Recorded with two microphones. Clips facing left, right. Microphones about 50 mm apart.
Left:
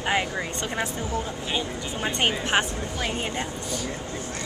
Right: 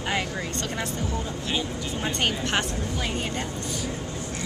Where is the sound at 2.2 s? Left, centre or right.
Centre.